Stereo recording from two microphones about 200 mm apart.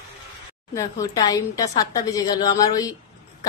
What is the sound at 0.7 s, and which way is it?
A woman's voice, 15° left (ahead or behind).